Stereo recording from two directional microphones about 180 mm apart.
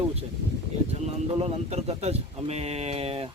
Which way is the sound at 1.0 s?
35° right (ahead or behind).